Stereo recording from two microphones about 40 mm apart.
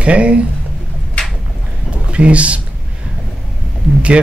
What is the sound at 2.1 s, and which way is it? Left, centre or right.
Speech, right.